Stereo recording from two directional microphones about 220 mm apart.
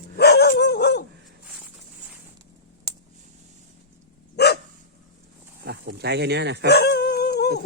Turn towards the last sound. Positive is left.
turn(degrees=50)  # may be behind; listen again after turning